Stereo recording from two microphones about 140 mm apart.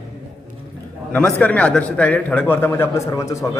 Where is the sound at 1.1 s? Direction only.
10° left (ahead or behind).